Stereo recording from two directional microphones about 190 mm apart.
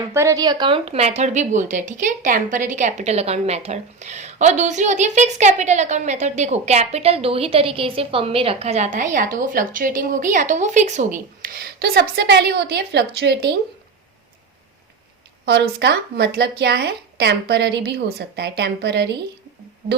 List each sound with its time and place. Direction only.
0.1 s a woman's voice: 15° right (ahead or behind); by 11.1 s 40° right (ahead or behind)
11.4 s speech: 55° right (ahead or behind)
15.4 s speech: 60° right (ahead or behind)